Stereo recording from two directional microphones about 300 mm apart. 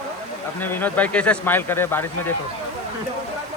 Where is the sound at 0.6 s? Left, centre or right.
Centre.